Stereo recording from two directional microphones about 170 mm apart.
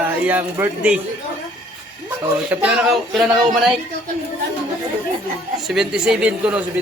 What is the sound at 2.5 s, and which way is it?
Speech, 5° right (ahead or behind).